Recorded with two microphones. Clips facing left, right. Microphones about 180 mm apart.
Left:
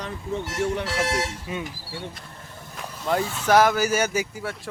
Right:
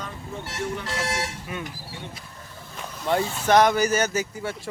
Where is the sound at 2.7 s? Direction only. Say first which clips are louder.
Right 1 dB; centre (ahead or behind).